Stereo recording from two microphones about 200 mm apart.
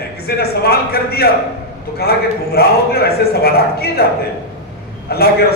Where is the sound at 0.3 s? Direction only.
50° left (ahead or behind).